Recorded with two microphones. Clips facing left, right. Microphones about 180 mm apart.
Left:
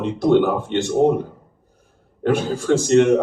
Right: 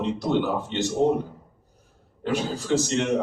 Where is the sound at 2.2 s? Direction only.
55° left (ahead or behind).